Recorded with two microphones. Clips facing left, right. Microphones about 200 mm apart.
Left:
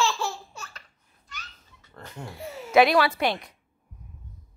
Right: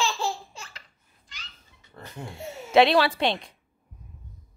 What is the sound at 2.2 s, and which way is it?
A woman's voice, 25° right (ahead or behind).